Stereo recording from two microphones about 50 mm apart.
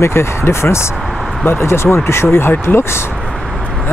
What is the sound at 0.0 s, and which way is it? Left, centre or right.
Speech, left.